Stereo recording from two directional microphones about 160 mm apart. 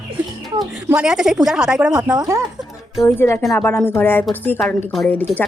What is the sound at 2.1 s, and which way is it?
Speech, 20° right (ahead or behind).